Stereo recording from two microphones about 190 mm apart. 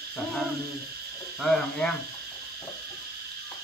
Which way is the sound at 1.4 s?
Centre (ahead or behind).